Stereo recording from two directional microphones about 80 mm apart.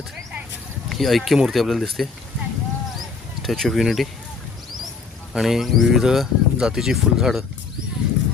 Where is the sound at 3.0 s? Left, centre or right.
Centre.